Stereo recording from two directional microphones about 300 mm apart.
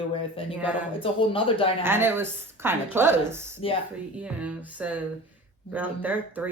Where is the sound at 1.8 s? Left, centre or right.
Centre.